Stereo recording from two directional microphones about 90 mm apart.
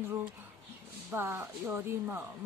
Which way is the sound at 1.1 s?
25° right (ahead or behind).